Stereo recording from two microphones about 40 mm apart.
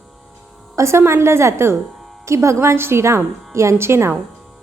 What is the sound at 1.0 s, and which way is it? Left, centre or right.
A woman's voice, right.